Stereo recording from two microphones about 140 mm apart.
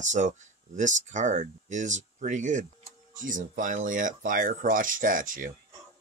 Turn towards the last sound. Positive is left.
turn(degrees=-75)  # may be behind; listen again after turning